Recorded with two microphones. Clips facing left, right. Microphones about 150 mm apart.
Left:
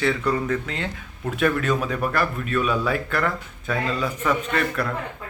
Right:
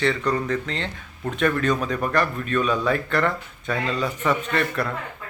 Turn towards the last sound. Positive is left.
turn(degrees=0)  # may be behind; listen again after turning